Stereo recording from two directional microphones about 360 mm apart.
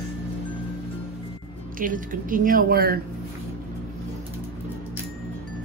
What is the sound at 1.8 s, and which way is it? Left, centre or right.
A woman's voice, right.